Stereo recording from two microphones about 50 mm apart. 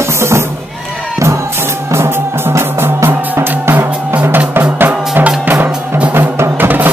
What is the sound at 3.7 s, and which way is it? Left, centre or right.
Music, right.